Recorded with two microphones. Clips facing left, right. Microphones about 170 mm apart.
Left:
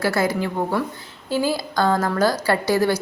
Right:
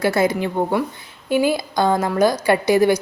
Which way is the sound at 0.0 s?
20° right (ahead or behind).